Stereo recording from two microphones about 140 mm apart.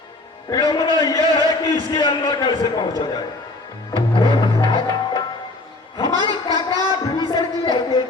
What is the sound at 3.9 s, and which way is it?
Music, 35° left (ahead or behind).